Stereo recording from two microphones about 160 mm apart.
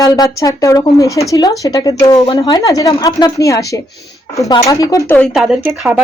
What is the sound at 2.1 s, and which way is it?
Speech, 35° left (ahead or behind).